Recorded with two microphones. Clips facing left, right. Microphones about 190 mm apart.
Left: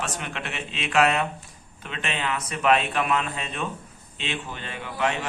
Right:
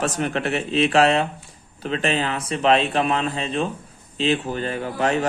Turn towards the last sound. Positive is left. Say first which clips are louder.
# right 5 dB
turn(degrees=-40)  # may be behind; listen again after turning